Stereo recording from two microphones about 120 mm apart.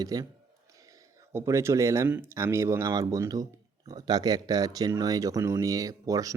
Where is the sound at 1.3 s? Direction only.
20° right (ahead or behind).